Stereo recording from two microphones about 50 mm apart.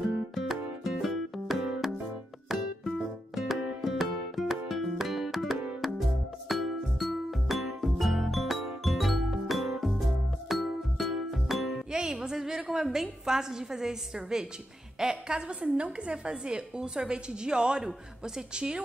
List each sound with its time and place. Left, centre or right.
0.3 s music: centre
11.9 s a woman's voice: centre